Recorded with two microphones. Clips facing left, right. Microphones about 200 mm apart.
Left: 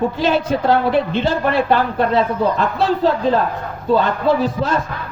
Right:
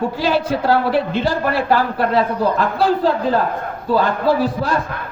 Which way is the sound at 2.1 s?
5° right (ahead or behind).